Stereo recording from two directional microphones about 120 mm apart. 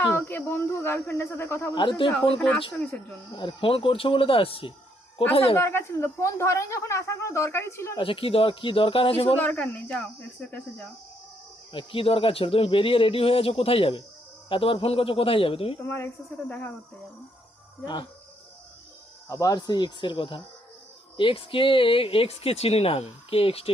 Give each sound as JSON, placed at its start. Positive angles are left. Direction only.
{"t": 0.0, "sound": "speech", "side_deg": 20}
{"t": 1.7, "sound": "speech", "side_deg": 40}
{"t": 3.3, "sound": "speech", "side_deg": 45}
{"t": 5.5, "sound": "speech", "side_deg": 20}
{"t": 7.9, "sound": "speech", "side_deg": 45}
{"t": 9.4, "sound": "speech", "side_deg": 15}
{"t": 11.7, "sound": "speech", "side_deg": 45}
{"t": 15.8, "sound": "speech", "side_deg": 20}
{"t": 19.3, "sound": "speech", "side_deg": 30}